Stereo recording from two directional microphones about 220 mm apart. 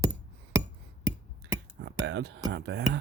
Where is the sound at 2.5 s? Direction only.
55° right (ahead or behind).